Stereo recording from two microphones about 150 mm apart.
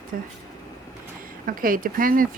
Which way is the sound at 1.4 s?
70° right (ahead or behind).